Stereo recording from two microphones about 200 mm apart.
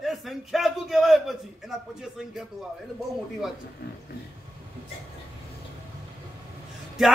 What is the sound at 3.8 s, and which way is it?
Speech, 55° left (ahead or behind).